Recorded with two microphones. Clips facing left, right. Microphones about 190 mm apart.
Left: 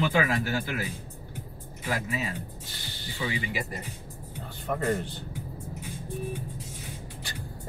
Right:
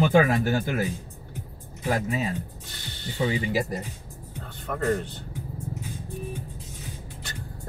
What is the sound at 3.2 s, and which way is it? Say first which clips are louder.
Speech: right 7 dB; 40° right (ahead or behind).